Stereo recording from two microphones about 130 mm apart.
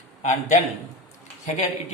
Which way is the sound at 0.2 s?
65° left (ahead or behind).